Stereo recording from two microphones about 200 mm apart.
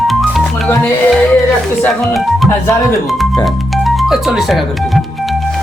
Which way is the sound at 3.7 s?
Centre (ahead or behind).